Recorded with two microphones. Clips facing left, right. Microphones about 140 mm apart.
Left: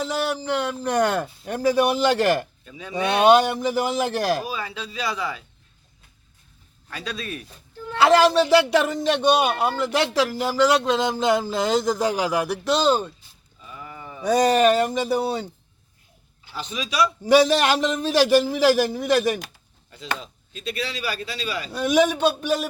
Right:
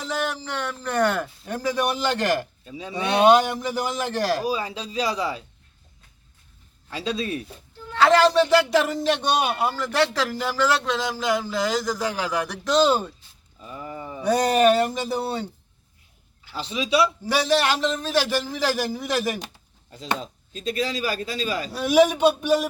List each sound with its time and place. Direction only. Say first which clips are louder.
0.0 s a sound: left 3 dB; 15° left (ahead or behind)
0.9 s speech: even; 15° left (ahead or behind)
2.6 s speech: right 3 dB; 25° right (ahead or behind)
3.5 s speech: left 4 dB; 5° left (ahead or behind)
4.4 s speech: right 4 dB; 35° right (ahead or behind)
6.9 s speech: right 5 dB; 25° right (ahead or behind)
7.9 s speech: left 1 dB; 10° left (ahead or behind)
9.7 s speech: left 2 dB; 10° left (ahead or behind)
13.6 s a sound: right 4 dB; 35° right (ahead or behind)
14.4 s speech: even; centre (ahead or behind)
16.6 s speech: right 2 dB; 25° right (ahead or behind)
17.2 s speech: left 5 dB; 20° left (ahead or behind); by 19.4 s centre (ahead or behind)
20.1 s speech: right 4 dB; 40° right (ahead or behind)
21.7 s speech: right 1 dB; 5° right (ahead or behind)